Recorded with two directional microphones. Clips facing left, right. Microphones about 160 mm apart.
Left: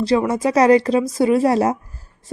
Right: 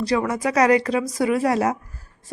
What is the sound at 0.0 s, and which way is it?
Speech, 25° left (ahead or behind).